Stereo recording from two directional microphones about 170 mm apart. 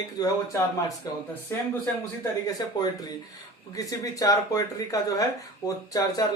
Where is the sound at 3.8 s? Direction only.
20° left (ahead or behind).